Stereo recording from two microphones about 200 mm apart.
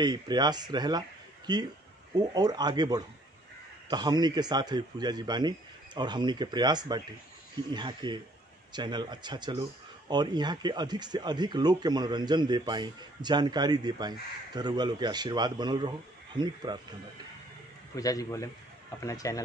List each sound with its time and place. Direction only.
0.0 s speech: 20° right (ahead or behind)
17.9 s a man's voice: 15° left (ahead or behind)